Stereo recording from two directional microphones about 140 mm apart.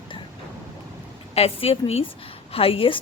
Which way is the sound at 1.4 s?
45° left (ahead or behind).